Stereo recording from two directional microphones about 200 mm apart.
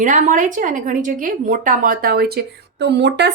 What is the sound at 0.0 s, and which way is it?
A woman's voice, 40° right (ahead or behind).